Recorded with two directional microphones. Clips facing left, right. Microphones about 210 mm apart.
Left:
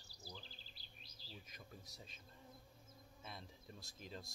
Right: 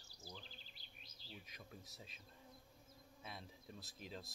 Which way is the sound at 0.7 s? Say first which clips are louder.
Left 1 dB; 35° left (ahead or behind).